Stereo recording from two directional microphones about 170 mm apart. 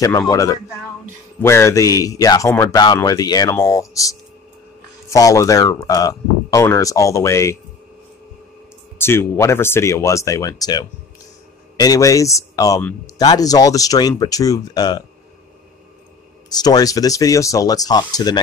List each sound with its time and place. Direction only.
0.3 s speech: 20° left (ahead or behind)
8.9 s speech: 15° left (ahead or behind)
16.4 s speech: 25° left (ahead or behind)